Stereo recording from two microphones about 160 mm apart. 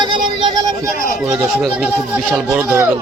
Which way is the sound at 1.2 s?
5° right (ahead or behind).